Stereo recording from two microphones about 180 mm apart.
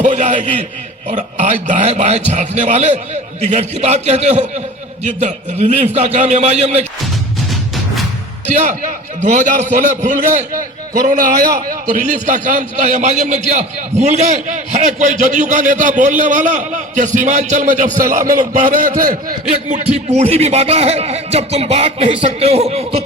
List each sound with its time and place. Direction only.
0.0 s a sound: 45° right (ahead or behind)
1.0 s speech: 40° right (ahead or behind)
8.6 s a man's voice: 40° right (ahead or behind)